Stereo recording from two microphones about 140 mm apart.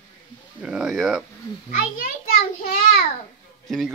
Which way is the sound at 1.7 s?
90° left.